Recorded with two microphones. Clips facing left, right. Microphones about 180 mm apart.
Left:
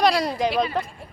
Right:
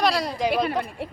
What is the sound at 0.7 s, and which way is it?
Speech, 80° right.